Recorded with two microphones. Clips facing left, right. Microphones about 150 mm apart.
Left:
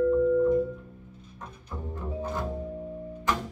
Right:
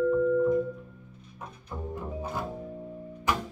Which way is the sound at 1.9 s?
10° right (ahead or behind).